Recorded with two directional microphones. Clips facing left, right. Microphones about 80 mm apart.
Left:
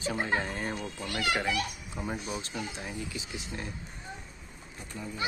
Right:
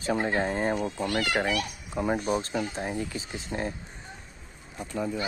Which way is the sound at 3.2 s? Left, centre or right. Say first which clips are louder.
Right 6 dB; right.